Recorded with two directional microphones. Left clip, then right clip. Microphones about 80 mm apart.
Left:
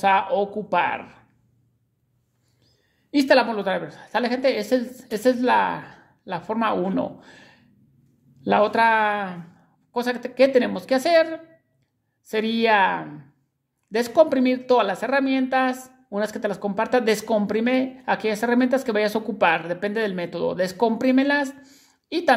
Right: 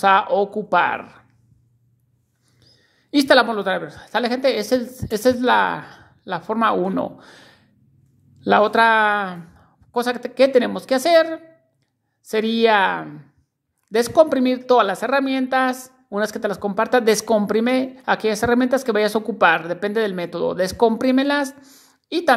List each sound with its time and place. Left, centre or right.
0.0 s speech: right
2.6 s a woman's voice: right
12.3 s a woman's voice: right